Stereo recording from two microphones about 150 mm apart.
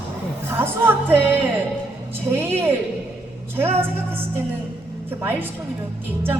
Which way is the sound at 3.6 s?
15° right (ahead or behind).